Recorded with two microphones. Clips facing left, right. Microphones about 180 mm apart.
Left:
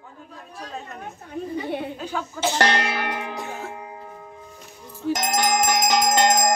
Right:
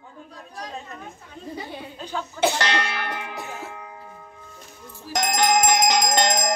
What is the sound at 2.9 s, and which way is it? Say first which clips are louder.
Music: left 3 dB; 25° left (ahead or behind).